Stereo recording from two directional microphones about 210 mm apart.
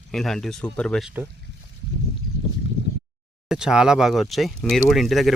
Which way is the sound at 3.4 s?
5° right (ahead or behind).